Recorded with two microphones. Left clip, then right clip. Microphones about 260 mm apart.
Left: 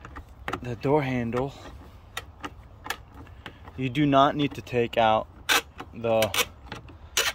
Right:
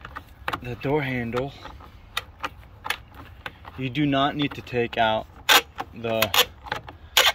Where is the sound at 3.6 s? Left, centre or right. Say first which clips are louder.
Even; centre.